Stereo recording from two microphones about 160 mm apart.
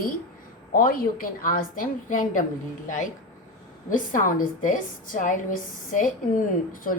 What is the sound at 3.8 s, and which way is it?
A woman's voice, 55° left (ahead or behind).